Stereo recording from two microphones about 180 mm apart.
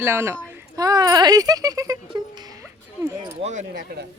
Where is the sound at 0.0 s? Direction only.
15° right (ahead or behind).